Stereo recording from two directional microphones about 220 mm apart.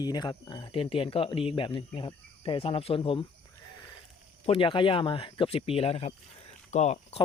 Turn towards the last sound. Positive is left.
turn(degrees=30)  # may be behind; listen again after turning